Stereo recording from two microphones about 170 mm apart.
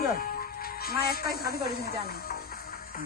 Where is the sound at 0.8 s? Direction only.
60° left (ahead or behind).